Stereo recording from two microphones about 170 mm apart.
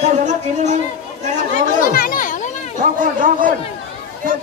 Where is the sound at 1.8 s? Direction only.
55° left (ahead or behind).